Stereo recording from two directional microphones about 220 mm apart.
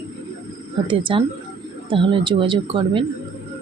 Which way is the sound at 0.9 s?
20° right (ahead or behind).